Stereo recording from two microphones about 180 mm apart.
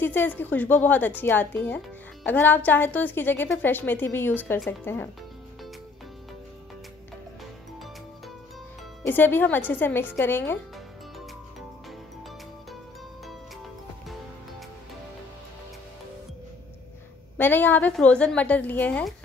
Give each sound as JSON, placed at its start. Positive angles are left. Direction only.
{"t": 0.0, "sound": "a woman's voice", "side_deg": 10}
{"t": 9.0, "sound": "a woman's voice", "side_deg": 10}
{"t": 17.4, "sound": "a woman's voice", "side_deg": 10}